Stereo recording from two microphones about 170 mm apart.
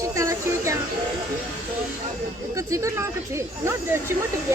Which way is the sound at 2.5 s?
20° right (ahead or behind).